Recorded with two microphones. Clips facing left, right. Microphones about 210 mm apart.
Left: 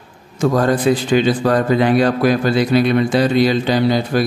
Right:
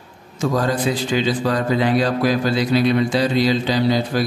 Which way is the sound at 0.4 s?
55° left (ahead or behind).